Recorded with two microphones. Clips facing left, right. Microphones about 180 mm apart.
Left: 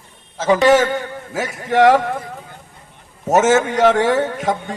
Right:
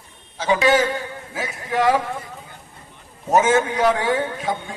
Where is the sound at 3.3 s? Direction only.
85° left.